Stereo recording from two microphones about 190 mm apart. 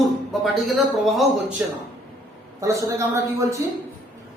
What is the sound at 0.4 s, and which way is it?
Speech, centre (ahead or behind).